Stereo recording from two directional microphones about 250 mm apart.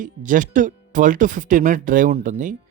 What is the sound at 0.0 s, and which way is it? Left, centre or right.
Speech, right.